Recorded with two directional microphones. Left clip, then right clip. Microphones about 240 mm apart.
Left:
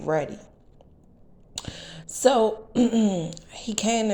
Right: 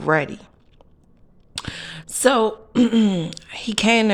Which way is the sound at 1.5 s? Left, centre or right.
Right.